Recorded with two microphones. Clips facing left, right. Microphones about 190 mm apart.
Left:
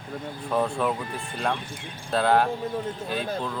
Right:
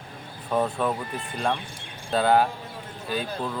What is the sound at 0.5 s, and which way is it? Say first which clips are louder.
Speech: even; centre (ahead or behind).